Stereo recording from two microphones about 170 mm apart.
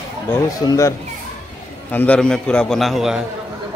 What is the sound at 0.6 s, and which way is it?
Speech, 25° left (ahead or behind).